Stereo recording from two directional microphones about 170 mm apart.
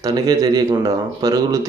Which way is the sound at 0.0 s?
20° right (ahead or behind).